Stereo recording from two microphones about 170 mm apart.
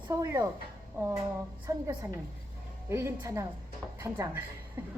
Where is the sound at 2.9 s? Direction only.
15° right (ahead or behind).